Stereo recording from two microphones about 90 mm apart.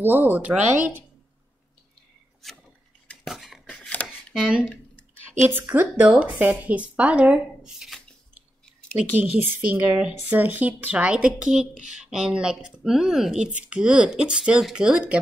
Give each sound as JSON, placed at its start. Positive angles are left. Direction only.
{"t": 0.0, "sound": "speech", "side_deg": -20}
{"t": 2.4, "sound": "filing", "side_deg": 0}
{"t": 3.3, "sound": "a sound", "side_deg": 0}
{"t": 3.6, "sound": "a sound", "side_deg": 15}
{"t": 5.4, "sound": "speech", "side_deg": -25}
{"t": 8.9, "sound": "speech", "side_deg": -15}